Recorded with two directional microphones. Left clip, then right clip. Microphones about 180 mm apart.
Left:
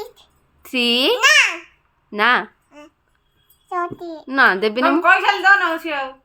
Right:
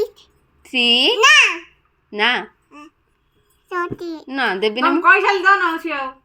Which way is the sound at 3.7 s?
10° right (ahead or behind).